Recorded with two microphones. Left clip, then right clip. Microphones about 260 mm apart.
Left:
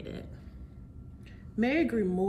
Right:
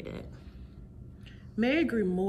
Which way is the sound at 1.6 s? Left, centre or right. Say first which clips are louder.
Even; centre.